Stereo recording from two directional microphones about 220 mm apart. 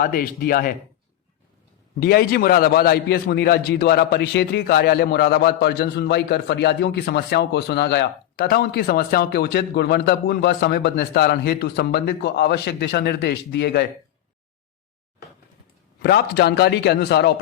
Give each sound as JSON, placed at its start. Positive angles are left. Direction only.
{"t": 0.0, "sound": "a man's voice", "side_deg": 40}
{"t": 2.0, "sound": "a man's voice", "side_deg": 45}
{"t": 16.0, "sound": "a man's voice", "side_deg": 50}